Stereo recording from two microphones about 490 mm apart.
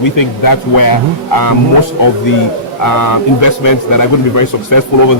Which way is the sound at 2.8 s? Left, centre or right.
Left.